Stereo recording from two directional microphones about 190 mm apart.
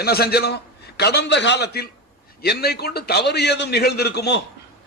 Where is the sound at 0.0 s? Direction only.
55° left (ahead or behind).